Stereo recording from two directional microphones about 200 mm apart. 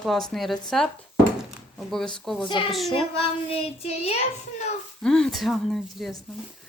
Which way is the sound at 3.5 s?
30° left (ahead or behind).